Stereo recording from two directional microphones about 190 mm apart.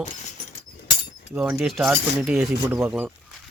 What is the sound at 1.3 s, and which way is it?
Speech, centre (ahead or behind).